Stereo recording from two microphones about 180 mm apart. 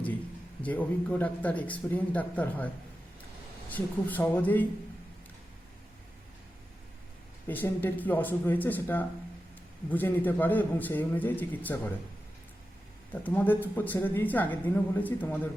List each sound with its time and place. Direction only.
0.6 s a woman's voice: 10° left (ahead or behind)
3.7 s a woman's voice: 10° left (ahead or behind)
7.4 s a woman's voice: 10° left (ahead or behind)
13.2 s a woman's voice: 10° left (ahead or behind)